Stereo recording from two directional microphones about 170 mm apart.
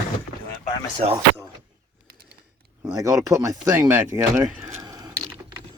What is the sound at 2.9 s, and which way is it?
Speech, 20° right (ahead or behind).